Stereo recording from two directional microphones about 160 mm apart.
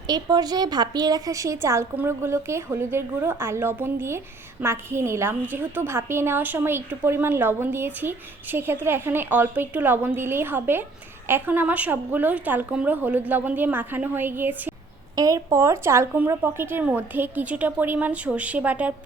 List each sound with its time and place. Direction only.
0.1 s a woman's voice: 25° right (ahead or behind); by 18.9 s 10° right (ahead or behind)